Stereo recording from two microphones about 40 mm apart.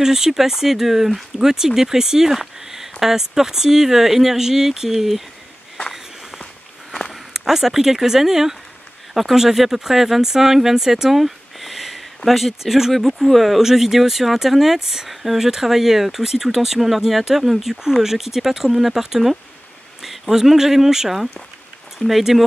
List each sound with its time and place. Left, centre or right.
0.0 s speech: centre
7.3 s speech: centre